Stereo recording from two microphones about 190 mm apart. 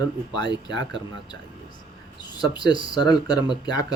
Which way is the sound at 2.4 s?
20° left (ahead or behind).